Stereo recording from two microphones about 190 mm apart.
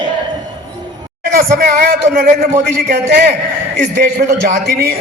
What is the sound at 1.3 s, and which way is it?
A man's voice, 50° right (ahead or behind).